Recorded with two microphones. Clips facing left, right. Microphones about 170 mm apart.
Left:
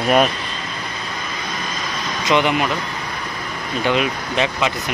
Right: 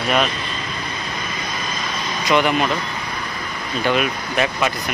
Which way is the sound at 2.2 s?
20° left (ahead or behind).